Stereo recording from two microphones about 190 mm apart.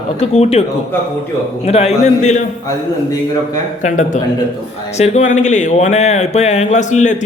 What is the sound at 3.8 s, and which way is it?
Speech, 40° left (ahead or behind).